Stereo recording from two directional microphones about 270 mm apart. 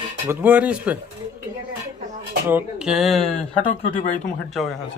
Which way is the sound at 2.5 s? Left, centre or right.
Centre.